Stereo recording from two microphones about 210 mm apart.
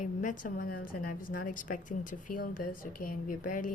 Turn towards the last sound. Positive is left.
turn(degrees=40)  # may be behind; listen again after turning